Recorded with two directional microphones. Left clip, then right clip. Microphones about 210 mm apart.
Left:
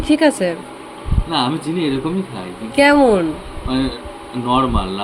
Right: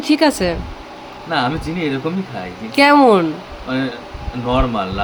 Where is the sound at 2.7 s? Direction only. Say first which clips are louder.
Right 1 dB; 25° right (ahead or behind).